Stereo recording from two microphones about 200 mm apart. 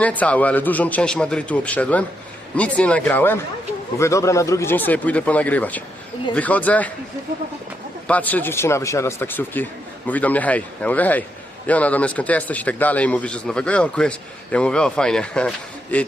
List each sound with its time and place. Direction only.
0.0 s a man's voice: 5° left (ahead or behind)
8.0 s a man's voice: 10° left (ahead or behind)